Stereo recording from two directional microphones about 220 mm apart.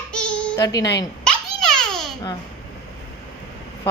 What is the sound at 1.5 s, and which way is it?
Babbling, centre (ahead or behind).